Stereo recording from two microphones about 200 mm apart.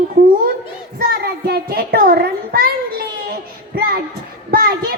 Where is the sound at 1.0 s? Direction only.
50° right (ahead or behind).